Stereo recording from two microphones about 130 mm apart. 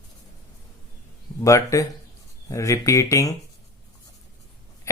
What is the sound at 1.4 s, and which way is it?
Speech, 25° left (ahead or behind).